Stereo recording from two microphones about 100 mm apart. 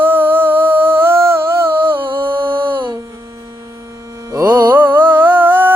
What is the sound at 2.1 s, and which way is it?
Music, 55° right (ahead or behind).